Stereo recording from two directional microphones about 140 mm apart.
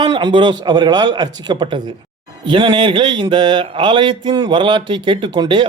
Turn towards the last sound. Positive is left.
turn(degrees=-35)  # may be behind; listen again after turning